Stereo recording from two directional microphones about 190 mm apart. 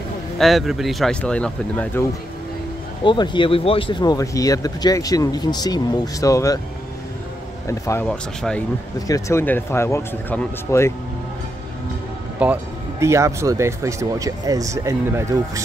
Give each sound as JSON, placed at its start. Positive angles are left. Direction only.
{"t": 0.4, "sound": "speech", "side_deg": 0}
{"t": 3.0, "sound": "speech", "side_deg": 25}
{"t": 7.6, "sound": "speech", "side_deg": 15}
{"t": 8.1, "sound": "speech", "side_deg": 5}
{"t": 9.0, "sound": "speech", "side_deg": 15}
{"t": 12.4, "sound": "speech", "side_deg": -5}